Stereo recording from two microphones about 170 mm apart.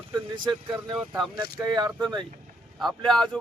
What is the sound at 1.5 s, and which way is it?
Speech, 25° right (ahead or behind).